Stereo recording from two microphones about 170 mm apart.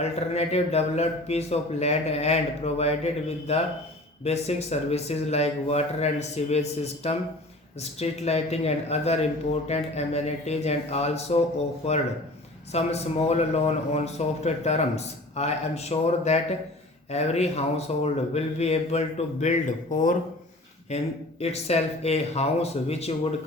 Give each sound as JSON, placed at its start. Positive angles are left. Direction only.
{"t": 0.0, "sound": "speech", "side_deg": 40}
{"t": 20.9, "sound": "speech", "side_deg": 40}